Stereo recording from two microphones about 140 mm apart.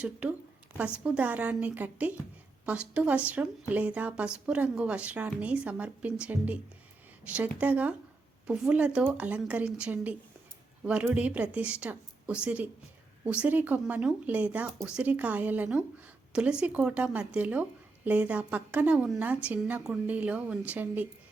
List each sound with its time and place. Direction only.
0.0 s speech: 10° right (ahead or behind)